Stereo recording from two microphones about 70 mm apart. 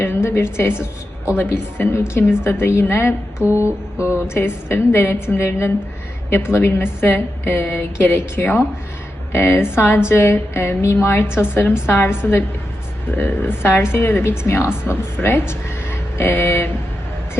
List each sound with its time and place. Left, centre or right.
0.0 s a woman's voice: left
3.4 s music: right
3.9 s a woman's voice: left